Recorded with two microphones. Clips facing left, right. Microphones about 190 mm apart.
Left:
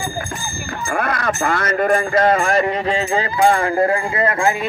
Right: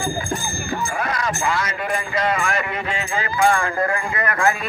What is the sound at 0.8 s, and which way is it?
Speech, 55° left (ahead or behind).